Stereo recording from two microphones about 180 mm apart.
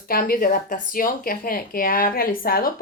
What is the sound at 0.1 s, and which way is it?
Speech, 50° left (ahead or behind).